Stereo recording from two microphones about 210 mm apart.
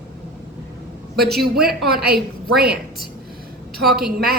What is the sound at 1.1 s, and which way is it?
Speech, centre (ahead or behind).